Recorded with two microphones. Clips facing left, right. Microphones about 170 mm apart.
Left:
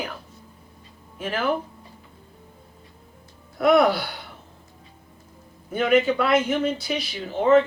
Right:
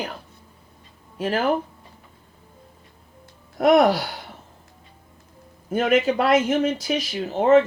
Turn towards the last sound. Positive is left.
turn(degrees=-45)  # may be behind; listen again after turning